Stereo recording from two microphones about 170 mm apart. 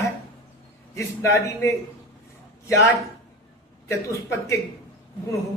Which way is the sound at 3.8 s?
15° left (ahead or behind).